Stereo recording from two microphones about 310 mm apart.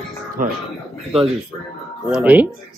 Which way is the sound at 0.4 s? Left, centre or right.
Right.